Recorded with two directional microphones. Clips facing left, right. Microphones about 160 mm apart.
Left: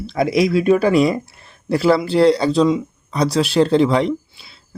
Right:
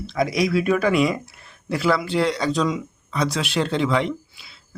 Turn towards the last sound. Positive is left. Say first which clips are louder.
# left 7 dB
turn(degrees=35)  # may be behind; listen again after turning